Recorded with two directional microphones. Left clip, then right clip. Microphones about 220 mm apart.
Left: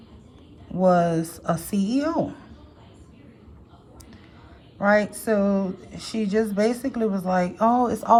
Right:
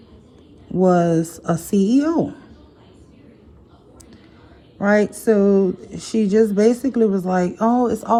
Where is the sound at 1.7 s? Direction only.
25° left (ahead or behind).